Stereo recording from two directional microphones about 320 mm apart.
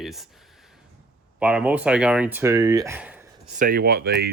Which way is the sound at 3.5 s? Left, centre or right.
Right.